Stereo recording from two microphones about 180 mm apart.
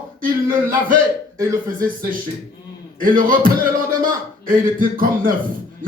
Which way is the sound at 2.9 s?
50° right (ahead or behind).